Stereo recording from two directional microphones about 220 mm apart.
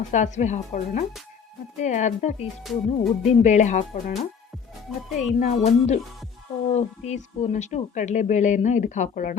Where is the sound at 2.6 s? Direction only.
Centre (ahead or behind).